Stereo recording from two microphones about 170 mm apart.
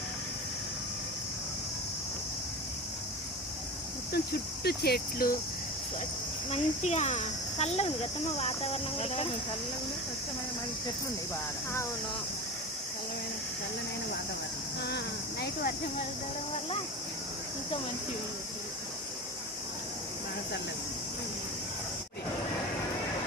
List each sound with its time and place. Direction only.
4.1 s cricket: 70° left (ahead or behind)
6.5 s speech: 40° left (ahead or behind)
14.8 s speech: 75° left (ahead or behind)